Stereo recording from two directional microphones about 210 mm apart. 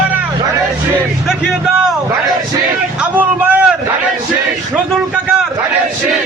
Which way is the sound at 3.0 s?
10° right (ahead or behind).